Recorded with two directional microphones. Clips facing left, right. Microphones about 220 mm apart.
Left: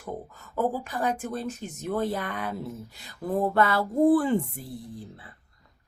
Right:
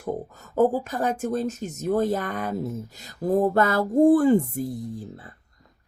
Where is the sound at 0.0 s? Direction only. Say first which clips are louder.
Right 6 dB; 45° right (ahead or behind).